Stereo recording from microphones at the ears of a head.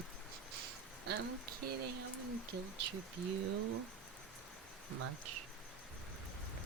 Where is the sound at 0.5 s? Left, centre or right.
Right.